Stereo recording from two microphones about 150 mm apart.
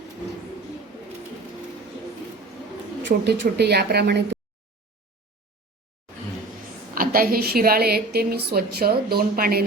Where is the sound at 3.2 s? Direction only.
90° right.